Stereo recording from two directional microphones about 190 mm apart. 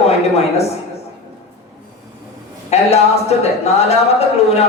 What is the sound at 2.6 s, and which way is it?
Speech, 35° left (ahead or behind).